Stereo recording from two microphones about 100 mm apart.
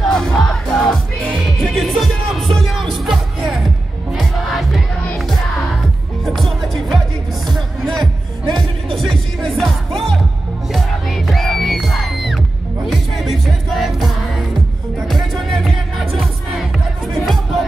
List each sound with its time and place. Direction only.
0.0 s crowd: 5° left (ahead or behind)
1.3 s music: centre (ahead or behind)
6.2 s music: centre (ahead or behind)
8.0 s music: 45° right (ahead or behind)
8.9 s music: centre (ahead or behind)
17.1 s music: centre (ahead or behind)